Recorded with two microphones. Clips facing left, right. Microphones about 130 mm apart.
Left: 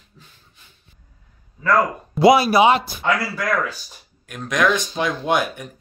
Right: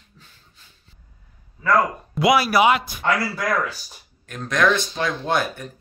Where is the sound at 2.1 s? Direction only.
25° left (ahead or behind).